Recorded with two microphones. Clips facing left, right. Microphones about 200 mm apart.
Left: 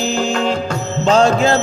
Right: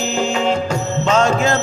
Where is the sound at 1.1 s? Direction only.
35° left (ahead or behind).